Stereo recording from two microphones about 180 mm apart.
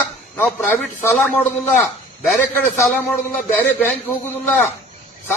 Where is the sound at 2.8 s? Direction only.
10° left (ahead or behind).